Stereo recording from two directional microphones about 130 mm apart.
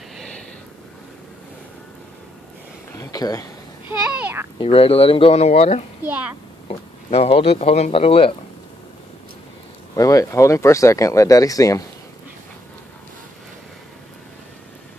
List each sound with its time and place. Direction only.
3.0 s speech: 30° left (ahead or behind)
4.1 s a child's voice: 15° right (ahead or behind)
4.6 s speech: 45° left (ahead or behind)
6.0 s a child's voice: 10° right (ahead or behind)
6.7 s speech: 50° left (ahead or behind)
9.9 s speech: 25° left (ahead or behind)